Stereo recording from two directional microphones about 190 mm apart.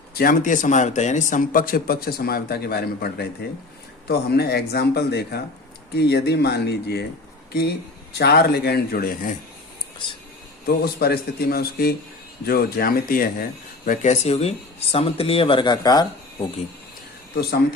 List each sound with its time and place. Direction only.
0.1 s speech: 50° left (ahead or behind)
8.2 s speech: 55° left (ahead or behind)
10.7 s speech: 55° left (ahead or behind); by 16.5 s 20° left (ahead or behind)